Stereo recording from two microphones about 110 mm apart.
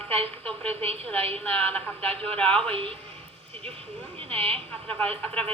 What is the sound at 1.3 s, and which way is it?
A woman's voice, 15° left (ahead or behind).